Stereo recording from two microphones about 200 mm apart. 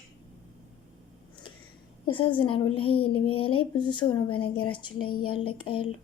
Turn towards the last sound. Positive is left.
turn(degrees=25)  # may be behind; listen again after turning